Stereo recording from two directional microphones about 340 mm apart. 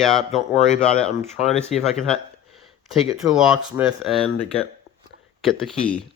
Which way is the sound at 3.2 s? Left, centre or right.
Centre.